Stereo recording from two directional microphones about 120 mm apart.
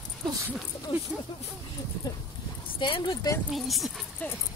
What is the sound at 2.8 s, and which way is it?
Speech, 40° left (ahead or behind).